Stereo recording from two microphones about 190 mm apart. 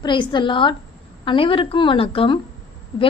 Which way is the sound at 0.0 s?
25° left (ahead or behind).